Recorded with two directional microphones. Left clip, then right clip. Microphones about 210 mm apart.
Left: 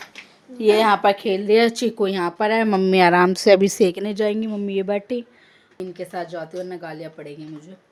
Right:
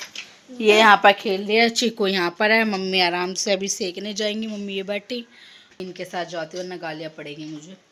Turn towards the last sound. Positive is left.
turn(degrees=0)  # may be behind; listen again after turning